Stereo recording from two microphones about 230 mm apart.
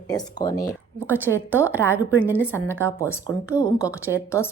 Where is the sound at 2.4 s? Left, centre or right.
Centre.